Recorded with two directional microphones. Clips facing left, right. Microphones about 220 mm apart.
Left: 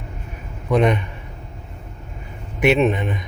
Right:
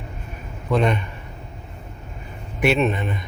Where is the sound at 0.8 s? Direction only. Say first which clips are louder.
Left 4 dB; 15° left (ahead or behind).